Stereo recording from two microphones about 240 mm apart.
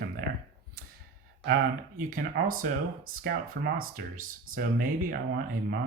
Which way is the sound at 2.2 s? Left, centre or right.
Right.